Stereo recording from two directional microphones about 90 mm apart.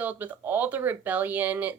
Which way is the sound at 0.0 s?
20° right (ahead or behind).